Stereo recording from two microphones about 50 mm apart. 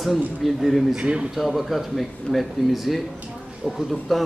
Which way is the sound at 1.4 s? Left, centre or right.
Centre.